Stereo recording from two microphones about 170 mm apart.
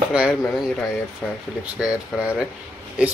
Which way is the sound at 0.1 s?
5° right (ahead or behind).